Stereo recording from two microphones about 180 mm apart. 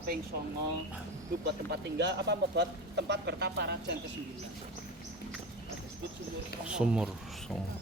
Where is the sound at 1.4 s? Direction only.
70° right (ahead or behind).